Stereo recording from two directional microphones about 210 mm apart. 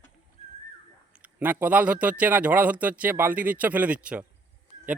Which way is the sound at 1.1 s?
5° right (ahead or behind).